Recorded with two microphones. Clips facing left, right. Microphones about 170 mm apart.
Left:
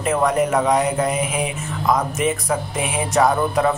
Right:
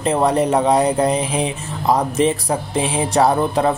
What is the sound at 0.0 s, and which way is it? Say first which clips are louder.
Speech: right 2 dB; 30° right (ahead or behind).